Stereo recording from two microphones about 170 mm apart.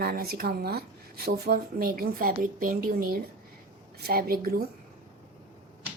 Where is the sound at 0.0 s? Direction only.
65° right (ahead or behind).